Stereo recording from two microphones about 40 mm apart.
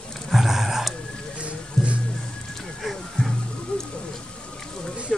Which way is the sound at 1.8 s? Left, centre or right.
Centre.